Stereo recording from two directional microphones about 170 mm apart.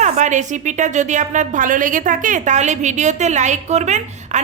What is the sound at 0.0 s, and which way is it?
A woman's voice, 45° right (ahead or behind).